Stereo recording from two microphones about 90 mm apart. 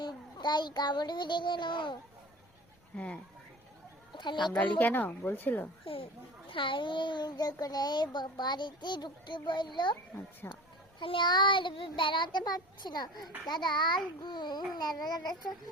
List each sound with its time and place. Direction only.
0.0 s child singing: 55° left (ahead or behind)
2.9 s speech: 15° left (ahead or behind)
4.1 s speech: 60° left (ahead or behind)
4.8 s speech: 20° left (ahead or behind)
5.8 s speech: 90° left
6.5 s speech: 70° left (ahead or behind)
10.4 s speech: 25° left (ahead or behind)
11.0 s child singing: 75° left (ahead or behind)
11.3 s speech: 60° left (ahead or behind)